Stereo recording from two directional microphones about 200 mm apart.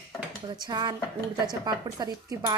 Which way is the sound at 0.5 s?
20° right (ahead or behind).